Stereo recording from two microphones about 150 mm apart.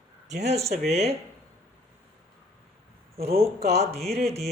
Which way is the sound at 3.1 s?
40° right (ahead or behind).